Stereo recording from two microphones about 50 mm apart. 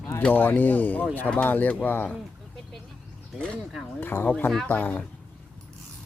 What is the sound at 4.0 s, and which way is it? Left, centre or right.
Speech, left.